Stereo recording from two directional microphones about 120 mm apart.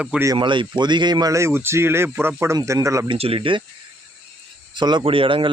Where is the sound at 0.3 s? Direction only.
45° right (ahead or behind); by 3.1 s 25° right (ahead or behind).